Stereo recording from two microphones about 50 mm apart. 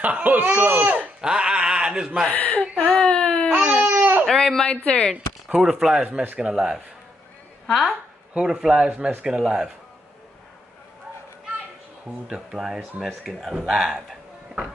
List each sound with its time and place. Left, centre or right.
0.0 s speech: right
0.9 s a sound: centre
2.3 s speech: left
2.9 s whimper: centre
3.6 s baby cry: right
4.0 s baby cry: right
4.3 s speech: centre
4.6 s speech: left
5.1 s speech: centre
7.6 s a woman's voice: centre
8.4 s a man's voice: centre
12.3 s speech: centre